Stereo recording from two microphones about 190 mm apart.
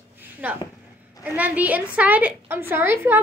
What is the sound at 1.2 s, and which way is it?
A child's voice, 10° right (ahead or behind).